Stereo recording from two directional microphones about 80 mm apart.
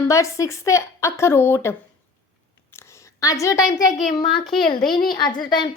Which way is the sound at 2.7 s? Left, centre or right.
Left.